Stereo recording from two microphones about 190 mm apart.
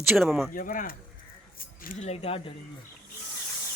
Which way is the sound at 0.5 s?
45° left (ahead or behind).